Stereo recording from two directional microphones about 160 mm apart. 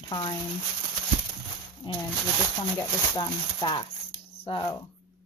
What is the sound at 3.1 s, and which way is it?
Speech, 25° left (ahead or behind).